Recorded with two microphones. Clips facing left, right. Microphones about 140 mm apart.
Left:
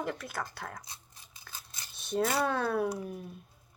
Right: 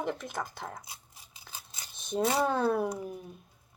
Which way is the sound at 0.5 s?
5° right (ahead or behind).